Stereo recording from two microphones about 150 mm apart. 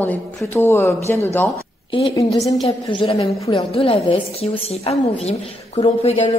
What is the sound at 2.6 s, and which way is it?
A woman's voice, 35° left (ahead or behind).